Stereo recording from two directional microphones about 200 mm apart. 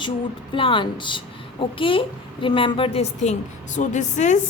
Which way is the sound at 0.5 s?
25° left (ahead or behind).